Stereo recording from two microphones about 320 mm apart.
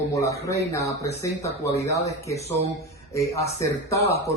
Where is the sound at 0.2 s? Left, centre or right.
Centre.